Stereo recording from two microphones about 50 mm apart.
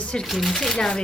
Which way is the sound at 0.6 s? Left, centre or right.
Centre.